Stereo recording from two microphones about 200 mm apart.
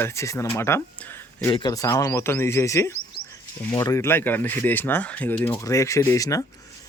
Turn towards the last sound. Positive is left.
turn(degrees=15)  # may be behind; listen again after turning